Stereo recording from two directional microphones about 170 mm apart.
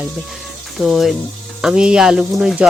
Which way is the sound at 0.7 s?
Centre (ahead or behind).